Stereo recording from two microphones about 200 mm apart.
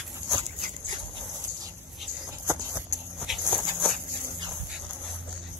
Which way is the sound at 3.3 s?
Centre (ahead or behind).